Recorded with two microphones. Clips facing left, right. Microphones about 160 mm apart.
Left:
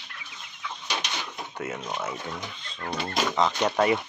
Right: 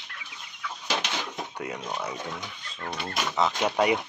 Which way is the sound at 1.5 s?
15° right (ahead or behind).